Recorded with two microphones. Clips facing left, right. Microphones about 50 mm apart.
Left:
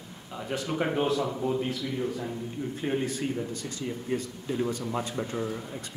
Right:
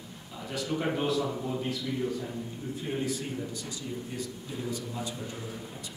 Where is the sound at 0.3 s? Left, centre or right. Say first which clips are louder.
Left 2 dB; left.